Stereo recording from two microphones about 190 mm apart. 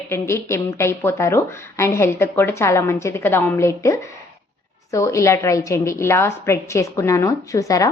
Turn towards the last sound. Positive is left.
turn(degrees=15)  # may be behind; listen again after turning